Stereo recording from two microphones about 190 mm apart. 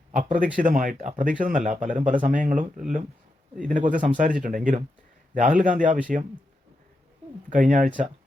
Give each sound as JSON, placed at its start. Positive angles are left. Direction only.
{"t": 0.1, "sound": "speech", "side_deg": -40}
{"t": 7.5, "sound": "speech", "side_deg": -45}